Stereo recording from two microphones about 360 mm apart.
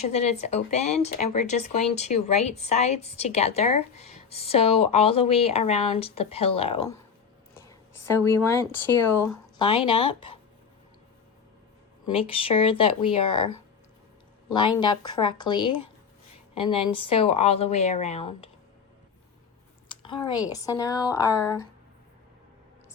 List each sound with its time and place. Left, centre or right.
0.1 s speech: centre
8.2 s speech: centre
12.1 s speech: centre
13.1 s speech: left
14.5 s speech: centre
17.0 s speech: centre
20.0 s speech: centre